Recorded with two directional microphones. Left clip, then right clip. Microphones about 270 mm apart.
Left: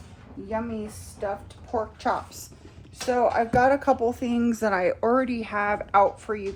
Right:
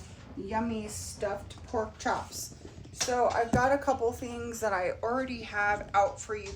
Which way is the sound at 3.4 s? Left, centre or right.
Left.